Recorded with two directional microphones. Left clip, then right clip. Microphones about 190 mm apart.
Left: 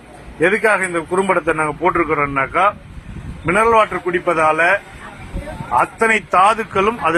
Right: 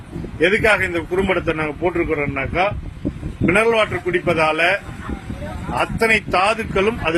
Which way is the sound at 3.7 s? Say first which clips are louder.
Left 3 dB; 20° right (ahead or behind).